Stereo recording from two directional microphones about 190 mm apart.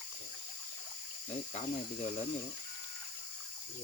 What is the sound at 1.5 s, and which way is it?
Speech, 35° left (ahead or behind).